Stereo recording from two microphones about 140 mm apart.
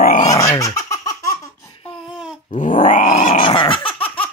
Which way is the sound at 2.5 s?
70° left (ahead or behind).